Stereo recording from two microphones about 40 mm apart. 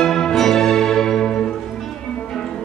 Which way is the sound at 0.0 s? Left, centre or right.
Centre.